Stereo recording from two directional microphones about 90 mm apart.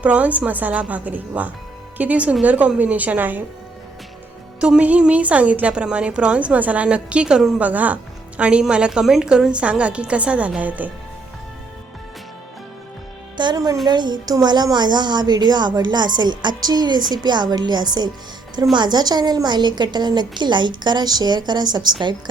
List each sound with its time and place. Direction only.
0.0 s a woman's voice: 15° right (ahead or behind)
4.6 s a woman's voice: 10° right (ahead or behind)
13.3 s music: 55° right (ahead or behind)
13.8 s a woman's voice: 55° right (ahead or behind)